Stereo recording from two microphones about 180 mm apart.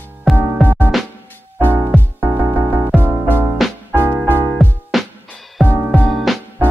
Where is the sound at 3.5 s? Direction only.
Centre (ahead or behind).